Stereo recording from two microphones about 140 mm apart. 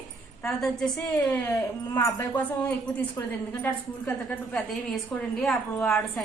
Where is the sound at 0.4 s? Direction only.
5° left (ahead or behind).